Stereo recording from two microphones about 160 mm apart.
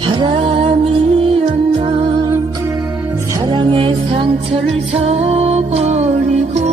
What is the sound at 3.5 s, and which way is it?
Music, 30° right (ahead or behind).